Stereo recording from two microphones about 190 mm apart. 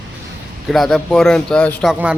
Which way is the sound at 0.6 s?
Centre (ahead or behind).